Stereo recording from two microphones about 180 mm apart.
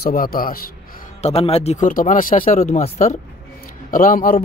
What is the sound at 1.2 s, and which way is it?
Speech, 35° left (ahead or behind).